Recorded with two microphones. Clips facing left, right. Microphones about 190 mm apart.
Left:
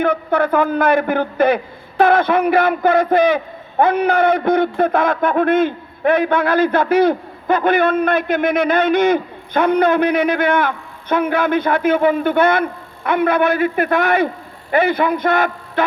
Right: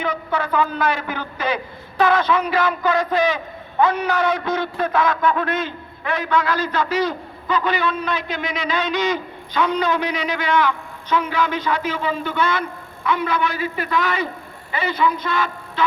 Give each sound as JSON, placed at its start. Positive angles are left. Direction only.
{"t": 0.0, "sound": "a man's voice", "side_deg": 55}